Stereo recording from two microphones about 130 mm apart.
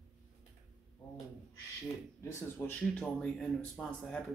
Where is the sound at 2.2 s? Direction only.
15° left (ahead or behind).